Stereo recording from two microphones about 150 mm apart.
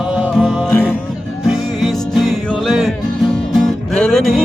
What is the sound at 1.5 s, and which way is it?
Music, centre (ahead or behind).